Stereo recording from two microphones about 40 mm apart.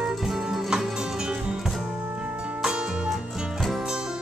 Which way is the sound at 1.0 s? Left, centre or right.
Centre.